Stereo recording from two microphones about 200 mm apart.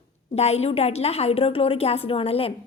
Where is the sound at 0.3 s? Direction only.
30° left (ahead or behind).